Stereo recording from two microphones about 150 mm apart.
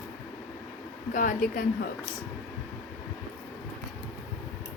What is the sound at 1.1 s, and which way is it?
Speech, 65° left (ahead or behind).